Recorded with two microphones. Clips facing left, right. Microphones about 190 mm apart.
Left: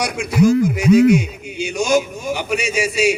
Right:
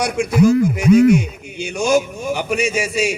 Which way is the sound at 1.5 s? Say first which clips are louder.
Even; 55° right (ahead or behind).